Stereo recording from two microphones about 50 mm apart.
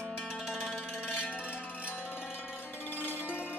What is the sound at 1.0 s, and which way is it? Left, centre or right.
Music, left.